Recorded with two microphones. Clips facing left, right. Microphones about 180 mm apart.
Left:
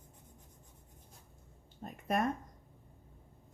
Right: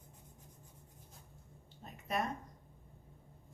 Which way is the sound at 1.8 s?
50° left (ahead or behind).